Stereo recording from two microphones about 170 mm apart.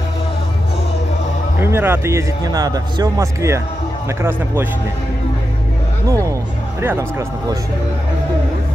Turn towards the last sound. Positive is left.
turn(degrees=-15)  # may be behind; listen again after turning